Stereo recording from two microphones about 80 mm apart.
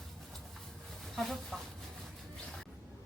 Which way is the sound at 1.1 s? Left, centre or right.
Centre.